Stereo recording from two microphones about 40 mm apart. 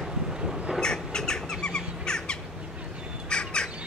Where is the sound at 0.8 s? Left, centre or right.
Centre.